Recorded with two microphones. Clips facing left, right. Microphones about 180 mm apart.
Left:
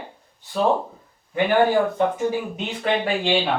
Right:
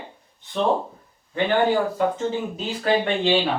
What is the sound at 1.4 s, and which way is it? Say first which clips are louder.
Speech: left 2 dB; 10° left (ahead or behind).